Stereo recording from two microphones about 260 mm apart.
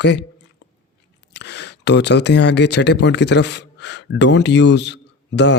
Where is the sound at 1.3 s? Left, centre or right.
Left.